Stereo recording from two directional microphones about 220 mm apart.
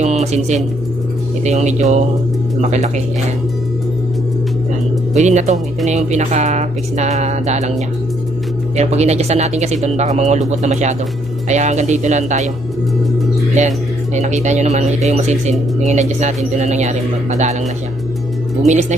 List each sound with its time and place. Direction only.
0.0 s speech: 30° right (ahead or behind)
5.1 s speech: 30° right (ahead or behind)
8.7 s speech: 30° right (ahead or behind)
13.6 s speech: 30° right (ahead or behind)
18.7 s speech: 30° right (ahead or behind)